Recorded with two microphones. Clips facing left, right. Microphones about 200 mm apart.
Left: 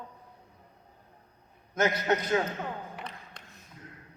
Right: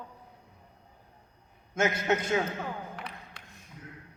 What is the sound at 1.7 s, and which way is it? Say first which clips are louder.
Speech: even; 25° right (ahead or behind).